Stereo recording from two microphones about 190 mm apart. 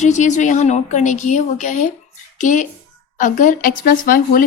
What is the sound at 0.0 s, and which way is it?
A woman's voice, 40° left (ahead or behind).